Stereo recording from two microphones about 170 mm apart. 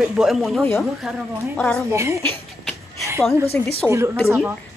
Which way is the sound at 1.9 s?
15° right (ahead or behind).